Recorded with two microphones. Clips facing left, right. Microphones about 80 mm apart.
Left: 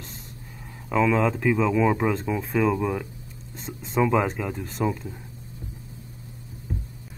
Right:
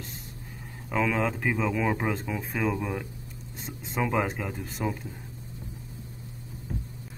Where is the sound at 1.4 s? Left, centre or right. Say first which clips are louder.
Left 6 dB; centre.